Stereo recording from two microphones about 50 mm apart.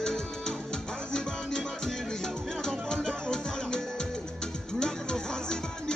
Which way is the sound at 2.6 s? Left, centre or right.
Centre.